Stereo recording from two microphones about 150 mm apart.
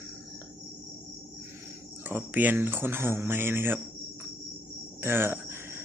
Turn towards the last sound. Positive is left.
turn(degrees=-15)  # may be behind; listen again after turning